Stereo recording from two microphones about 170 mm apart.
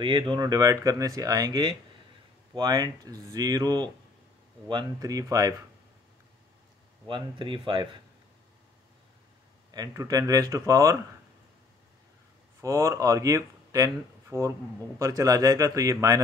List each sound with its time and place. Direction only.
0.0 s speech: 25° right (ahead or behind)
7.1 s speech: 25° right (ahead or behind)
9.7 s speech: 20° right (ahead or behind)
12.6 s speech: 20° right (ahead or behind)